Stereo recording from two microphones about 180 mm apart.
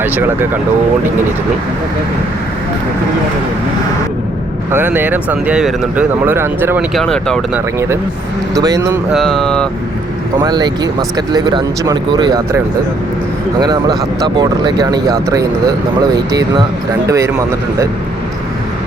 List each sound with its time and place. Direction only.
0.0 s speech: 10° right (ahead or behind)
4.7 s speech: 10° right (ahead or behind)
6.9 s speech: 5° left (ahead or behind)
7.5 s speech: 15° right (ahead or behind)
9.1 s speech: centre (ahead or behind)
10.4 s speech: 25° right (ahead or behind)
13.6 s speech: 20° right (ahead or behind)